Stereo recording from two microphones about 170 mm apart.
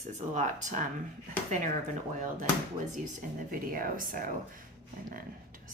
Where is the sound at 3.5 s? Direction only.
55° right (ahead or behind).